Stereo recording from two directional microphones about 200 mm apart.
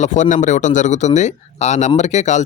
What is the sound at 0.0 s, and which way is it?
Speech, 35° left (ahead or behind).